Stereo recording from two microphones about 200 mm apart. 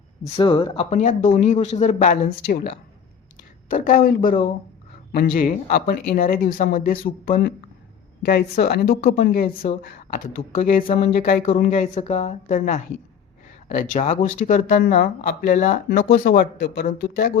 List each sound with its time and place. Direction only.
0.3 s speech: 25° left (ahead or behind); by 17.3 s 45° left (ahead or behind)